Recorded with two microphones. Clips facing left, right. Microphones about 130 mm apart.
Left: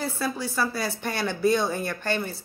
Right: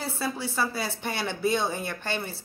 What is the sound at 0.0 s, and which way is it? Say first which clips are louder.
Speech: left 2 dB; 25° right (ahead or behind).